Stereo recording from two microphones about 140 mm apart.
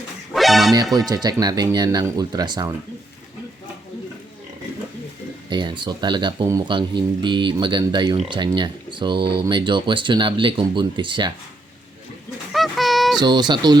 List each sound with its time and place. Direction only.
0.3 s music: centre (ahead or behind)
0.9 s speech: 25° right (ahead or behind)
5.5 s speech: 35° right (ahead or behind)
12.5 s a sound: centre (ahead or behind)
13.1 s speech: 30° right (ahead or behind)